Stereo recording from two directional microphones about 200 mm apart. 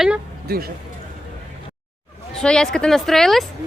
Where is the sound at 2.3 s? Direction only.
5° left (ahead or behind).